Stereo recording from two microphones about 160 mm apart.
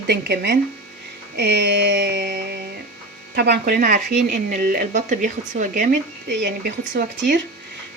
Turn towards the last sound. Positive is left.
turn(degrees=-85)